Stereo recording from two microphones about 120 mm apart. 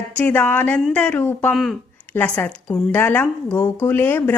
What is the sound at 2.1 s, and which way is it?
A woman's voice, 15° left (ahead or behind).